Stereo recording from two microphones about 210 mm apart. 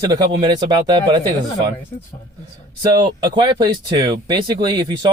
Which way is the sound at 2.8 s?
20° right (ahead or behind).